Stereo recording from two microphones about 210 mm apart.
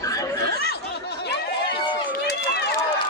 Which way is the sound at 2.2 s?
50° left (ahead or behind).